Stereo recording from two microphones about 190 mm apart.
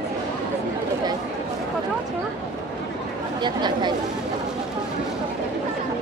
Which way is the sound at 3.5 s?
20° right (ahead or behind).